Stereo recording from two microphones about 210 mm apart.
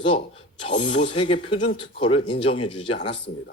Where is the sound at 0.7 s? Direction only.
25° left (ahead or behind).